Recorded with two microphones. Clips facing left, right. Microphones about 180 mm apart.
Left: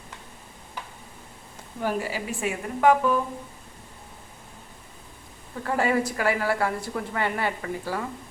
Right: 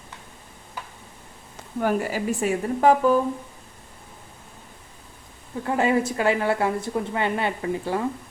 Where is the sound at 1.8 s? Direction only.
50° right (ahead or behind).